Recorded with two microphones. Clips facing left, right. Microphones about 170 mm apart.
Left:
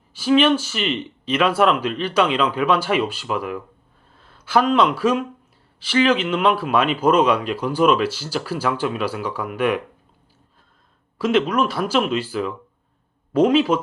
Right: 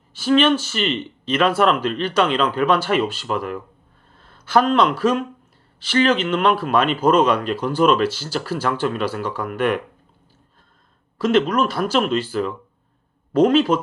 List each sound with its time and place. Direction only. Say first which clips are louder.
0.2 s speech: even; 10° left (ahead or behind)
11.2 s speech: right 1 dB; 10° left (ahead or behind)